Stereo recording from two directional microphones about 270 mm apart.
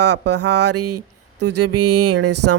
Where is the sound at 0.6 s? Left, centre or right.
Right.